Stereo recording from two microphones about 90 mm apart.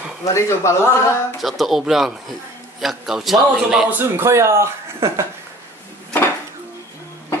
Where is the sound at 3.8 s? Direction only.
25° right (ahead or behind).